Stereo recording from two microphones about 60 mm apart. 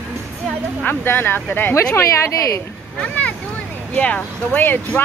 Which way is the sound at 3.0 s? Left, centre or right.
Left.